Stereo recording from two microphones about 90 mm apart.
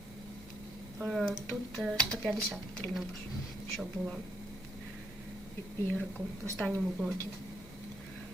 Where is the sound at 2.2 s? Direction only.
5° left (ahead or behind).